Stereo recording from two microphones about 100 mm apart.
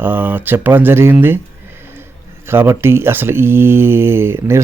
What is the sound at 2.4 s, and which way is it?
Speech, 25° right (ahead or behind).